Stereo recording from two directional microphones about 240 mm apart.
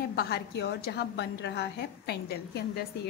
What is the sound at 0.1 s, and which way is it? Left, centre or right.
A woman's voice, left.